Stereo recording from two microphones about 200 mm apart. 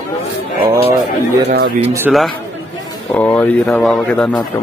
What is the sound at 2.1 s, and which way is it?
Speech, centre (ahead or behind).